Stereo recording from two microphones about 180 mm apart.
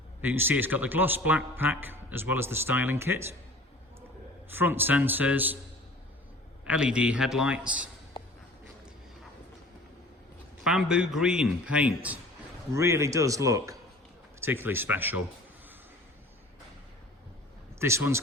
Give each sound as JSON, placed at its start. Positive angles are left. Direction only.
{"t": 0.2, "sound": "a man's voice", "side_deg": -10}
{"t": 4.4, "sound": "a man's voice", "side_deg": -10}
{"t": 6.7, "sound": "a man's voice", "side_deg": -5}
{"t": 10.6, "sound": "a man's voice", "side_deg": 0}
{"t": 17.7, "sound": "speech", "side_deg": -15}